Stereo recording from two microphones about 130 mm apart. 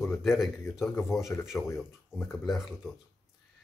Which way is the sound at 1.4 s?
5° right (ahead or behind).